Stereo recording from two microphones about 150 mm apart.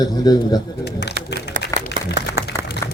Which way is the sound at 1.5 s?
65° right (ahead or behind).